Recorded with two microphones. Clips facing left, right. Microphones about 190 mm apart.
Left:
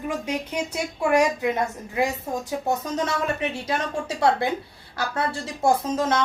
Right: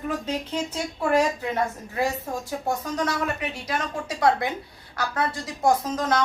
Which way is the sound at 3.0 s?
25° left (ahead or behind).